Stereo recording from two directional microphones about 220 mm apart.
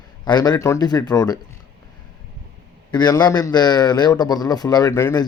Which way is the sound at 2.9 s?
20° left (ahead or behind).